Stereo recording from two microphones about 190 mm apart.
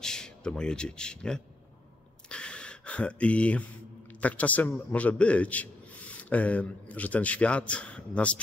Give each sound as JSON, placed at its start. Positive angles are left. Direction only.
{"t": 0.0, "sound": "a man's voice", "side_deg": 5}
{"t": 2.2, "sound": "a sound", "side_deg": 5}
{"t": 4.2, "sound": "a man's voice", "side_deg": 5}